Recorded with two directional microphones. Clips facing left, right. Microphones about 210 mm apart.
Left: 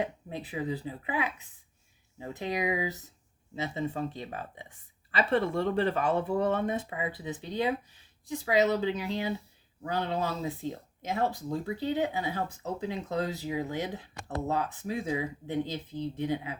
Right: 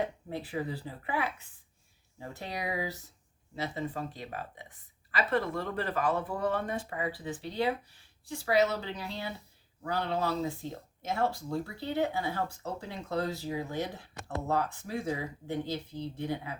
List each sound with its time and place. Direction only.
0.3 s speech: 20° left (ahead or behind)